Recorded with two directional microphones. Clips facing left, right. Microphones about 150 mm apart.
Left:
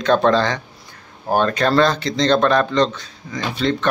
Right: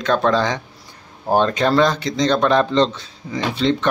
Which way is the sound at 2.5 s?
25° right (ahead or behind).